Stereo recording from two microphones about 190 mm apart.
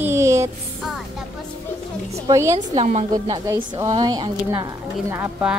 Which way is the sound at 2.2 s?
15° right (ahead or behind).